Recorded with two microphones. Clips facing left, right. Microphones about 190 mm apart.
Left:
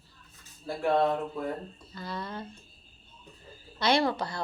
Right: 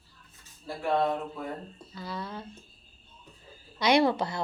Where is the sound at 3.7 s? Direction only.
15° right (ahead or behind).